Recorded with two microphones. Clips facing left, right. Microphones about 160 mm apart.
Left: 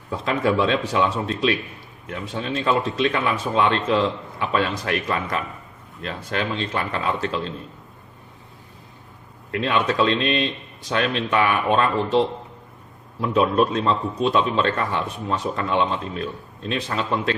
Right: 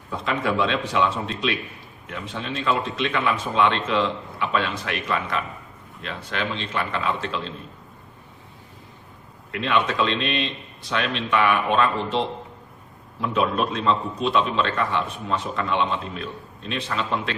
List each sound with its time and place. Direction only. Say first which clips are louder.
0.3 s a man's voice: left 3 dB; 40° left (ahead or behind)
9.6 s a man's voice: left 2 dB; 40° left (ahead or behind)
13.2 s a man's voice: left 4 dB; 40° left (ahead or behind)